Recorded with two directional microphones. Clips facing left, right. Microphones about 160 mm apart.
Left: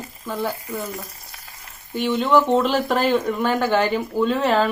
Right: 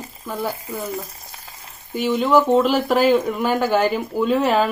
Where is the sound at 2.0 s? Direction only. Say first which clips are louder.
Right 1 dB; centre (ahead or behind).